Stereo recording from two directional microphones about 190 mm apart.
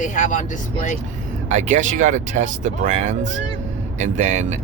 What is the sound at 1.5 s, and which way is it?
Speech, 40° right (ahead or behind).